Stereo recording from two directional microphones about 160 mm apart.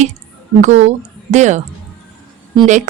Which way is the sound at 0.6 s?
45° right (ahead or behind).